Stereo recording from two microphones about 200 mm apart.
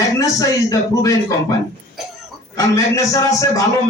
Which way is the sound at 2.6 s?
15° left (ahead or behind).